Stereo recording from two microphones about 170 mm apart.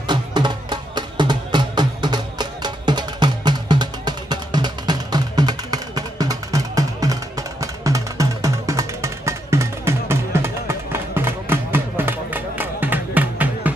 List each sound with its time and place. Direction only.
0.0 s music: 25° right (ahead or behind); by 13.7 s 10° right (ahead or behind)